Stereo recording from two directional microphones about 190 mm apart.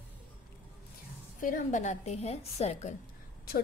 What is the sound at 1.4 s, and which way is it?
A woman's voice, 45° left (ahead or behind).